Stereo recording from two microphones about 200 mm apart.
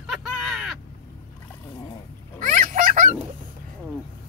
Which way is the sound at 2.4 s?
40° right (ahead or behind).